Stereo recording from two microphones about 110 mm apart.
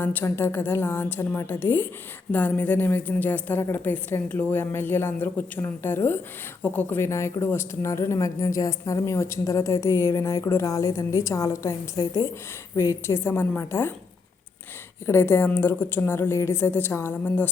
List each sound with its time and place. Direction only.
0.0 s a woman's voice: 15° left (ahead or behind)
15.0 s a woman's voice: 25° left (ahead or behind)